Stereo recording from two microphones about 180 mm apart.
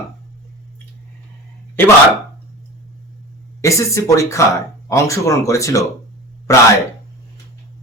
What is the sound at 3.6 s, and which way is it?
Speech, 15° left (ahead or behind).